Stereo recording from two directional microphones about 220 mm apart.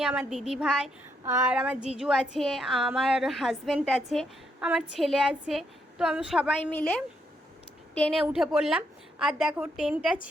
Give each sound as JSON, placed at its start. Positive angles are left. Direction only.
{"t": 0.0, "sound": "a woman's voice", "side_deg": -5}
{"t": 7.9, "sound": "a woman's voice", "side_deg": 5}